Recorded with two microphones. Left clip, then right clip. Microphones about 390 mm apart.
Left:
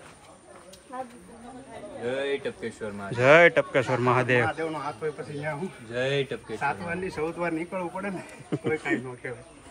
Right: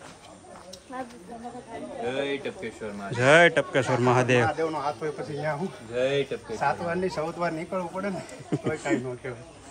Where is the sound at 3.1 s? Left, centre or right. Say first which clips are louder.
Left 1 dB; centre.